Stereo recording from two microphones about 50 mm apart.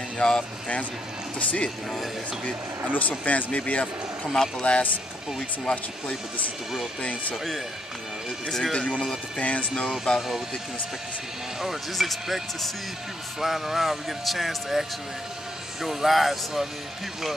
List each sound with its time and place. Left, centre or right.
0.2 s speech: centre
1.4 s speech: left
2.9 s speech: left
4.3 s speech: centre
7.0 s speech: left
8.5 s speech: centre
8.7 s speech: left
9.8 s speech: centre
11.6 s speech: centre